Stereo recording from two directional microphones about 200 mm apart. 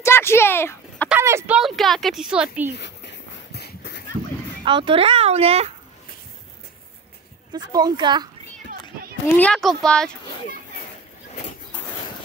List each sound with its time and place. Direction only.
0.0 s a sound: 10° left (ahead or behind)
1.0 s speech: 10° right (ahead or behind)
1.6 s speech: centre (ahead or behind)
2.7 s a sound: 60° left (ahead or behind)
4.6 s a child's voice: 25° right (ahead or behind)
7.5 s a child's voice: 20° right (ahead or behind)
9.4 s speech: centre (ahead or behind)